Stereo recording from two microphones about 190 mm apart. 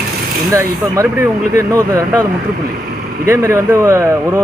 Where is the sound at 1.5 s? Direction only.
15° right (ahead or behind).